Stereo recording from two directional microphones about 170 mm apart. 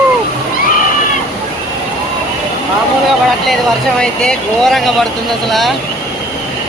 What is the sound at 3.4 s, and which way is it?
Speech, 5° left (ahead or behind).